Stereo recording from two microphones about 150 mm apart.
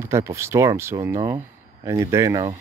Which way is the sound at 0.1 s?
20° right (ahead or behind).